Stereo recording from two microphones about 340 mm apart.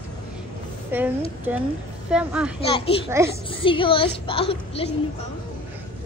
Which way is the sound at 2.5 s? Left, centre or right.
Centre.